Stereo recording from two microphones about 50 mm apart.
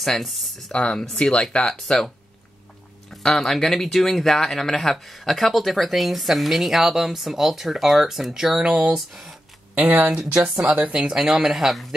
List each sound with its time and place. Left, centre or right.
0.0 s speech: centre
0.7 s speech: centre
3.1 s speech: centre
9.8 s speech: right
10.4 s speech: centre